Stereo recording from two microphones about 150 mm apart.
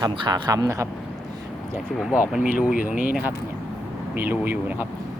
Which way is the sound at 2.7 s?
70° left (ahead or behind).